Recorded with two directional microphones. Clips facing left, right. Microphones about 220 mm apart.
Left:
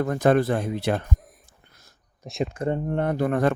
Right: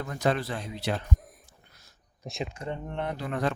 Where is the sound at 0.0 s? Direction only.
55° left (ahead or behind).